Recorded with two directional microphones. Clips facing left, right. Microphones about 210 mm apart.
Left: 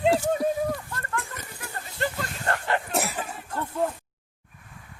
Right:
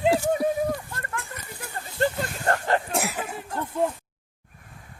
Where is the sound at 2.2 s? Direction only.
40° right (ahead or behind).